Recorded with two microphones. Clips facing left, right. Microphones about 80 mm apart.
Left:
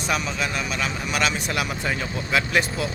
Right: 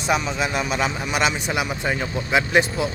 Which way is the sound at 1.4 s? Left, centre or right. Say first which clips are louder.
Right 2 dB; centre.